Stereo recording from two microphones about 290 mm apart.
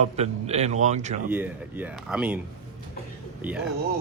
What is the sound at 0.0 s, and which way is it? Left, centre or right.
Speech, right.